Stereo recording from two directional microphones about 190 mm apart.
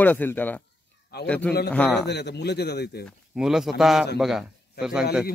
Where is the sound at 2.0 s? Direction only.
60° left (ahead or behind).